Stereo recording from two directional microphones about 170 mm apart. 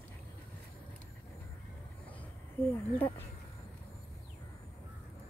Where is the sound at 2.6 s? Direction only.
10° left (ahead or behind).